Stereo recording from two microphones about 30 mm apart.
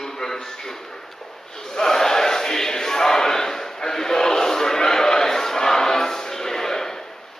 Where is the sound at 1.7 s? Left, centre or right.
Centre.